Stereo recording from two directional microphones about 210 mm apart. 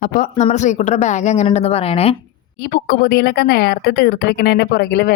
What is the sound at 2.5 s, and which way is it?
A woman's voice, 45° left (ahead or behind).